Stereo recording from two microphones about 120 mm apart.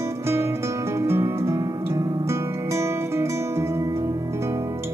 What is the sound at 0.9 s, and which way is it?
Music, 20° right (ahead or behind).